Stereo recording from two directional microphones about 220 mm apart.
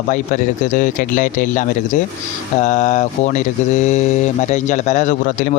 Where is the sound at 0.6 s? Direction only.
35° left (ahead or behind).